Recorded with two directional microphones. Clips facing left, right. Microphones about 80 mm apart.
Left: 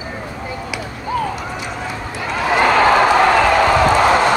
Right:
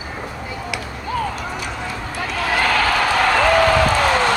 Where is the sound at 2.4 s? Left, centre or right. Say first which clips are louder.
Left 6 dB; left.